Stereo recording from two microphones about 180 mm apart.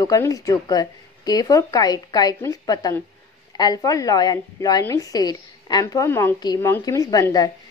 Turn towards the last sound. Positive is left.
turn(degrees=20)  # may be behind; listen again after turning